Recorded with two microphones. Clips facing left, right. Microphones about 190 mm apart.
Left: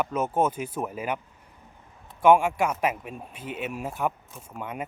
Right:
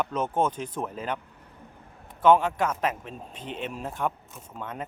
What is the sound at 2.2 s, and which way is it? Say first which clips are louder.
Speech: left 1 dB; 10° left (ahead or behind).